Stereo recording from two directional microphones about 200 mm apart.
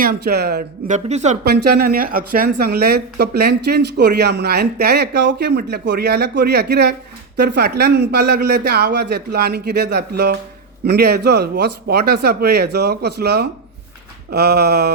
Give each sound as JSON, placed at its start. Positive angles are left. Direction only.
{"t": 0.0, "sound": "speech", "side_deg": -50}
{"t": 0.9, "sound": "speech", "side_deg": -35}
{"t": 1.5, "sound": "speech", "side_deg": -50}